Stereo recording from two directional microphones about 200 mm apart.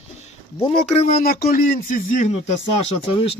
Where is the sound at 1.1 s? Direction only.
50° left (ahead or behind).